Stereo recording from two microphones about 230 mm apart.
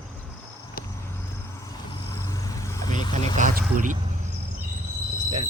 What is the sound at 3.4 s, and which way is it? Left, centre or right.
Speech, right.